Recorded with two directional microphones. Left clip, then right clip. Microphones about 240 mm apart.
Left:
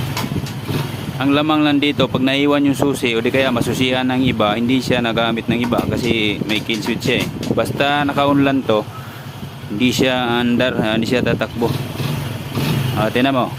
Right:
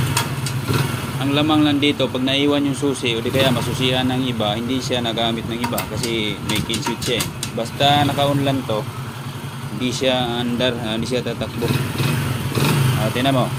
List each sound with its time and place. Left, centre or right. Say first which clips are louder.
1.2 s speech: left 2 dB; left
7.6 s speech: right 1 dB; left
9.8 s speech: left 3 dB; left
13.1 s speech: left 2 dB; left